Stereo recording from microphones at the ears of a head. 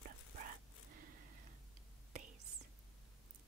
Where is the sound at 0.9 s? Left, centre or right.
Right.